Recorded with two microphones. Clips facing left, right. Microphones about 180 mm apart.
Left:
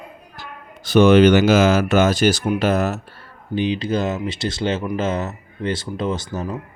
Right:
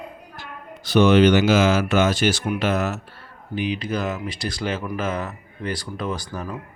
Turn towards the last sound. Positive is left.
turn(degrees=25)  # may be behind; listen again after turning